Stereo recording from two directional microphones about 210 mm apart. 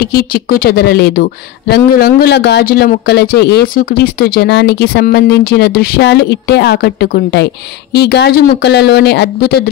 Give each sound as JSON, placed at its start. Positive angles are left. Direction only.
{"t": 0.0, "sound": "speech", "side_deg": 45}